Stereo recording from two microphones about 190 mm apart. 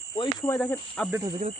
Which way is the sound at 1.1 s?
20° right (ahead or behind).